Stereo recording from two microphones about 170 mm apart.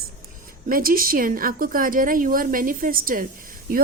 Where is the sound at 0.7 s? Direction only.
60° right (ahead or behind).